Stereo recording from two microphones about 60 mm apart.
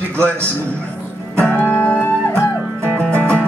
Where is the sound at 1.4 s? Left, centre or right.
Centre.